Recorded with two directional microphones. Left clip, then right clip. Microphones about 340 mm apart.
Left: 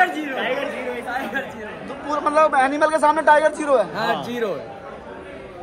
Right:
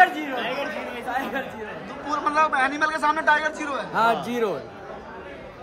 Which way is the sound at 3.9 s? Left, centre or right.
Centre.